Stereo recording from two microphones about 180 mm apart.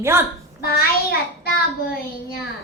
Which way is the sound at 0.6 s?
60° left (ahead or behind).